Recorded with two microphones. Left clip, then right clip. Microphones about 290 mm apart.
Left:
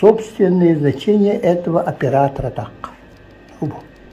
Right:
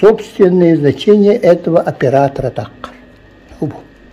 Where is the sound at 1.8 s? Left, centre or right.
Centre.